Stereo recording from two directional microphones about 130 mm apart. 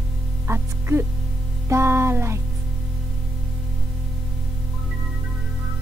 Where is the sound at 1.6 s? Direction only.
20° right (ahead or behind).